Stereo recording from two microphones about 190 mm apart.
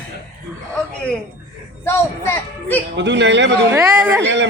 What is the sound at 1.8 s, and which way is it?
Speech, 15° left (ahead or behind).